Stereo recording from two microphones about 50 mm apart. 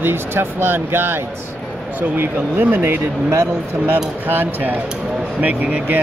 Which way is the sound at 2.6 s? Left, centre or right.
Right.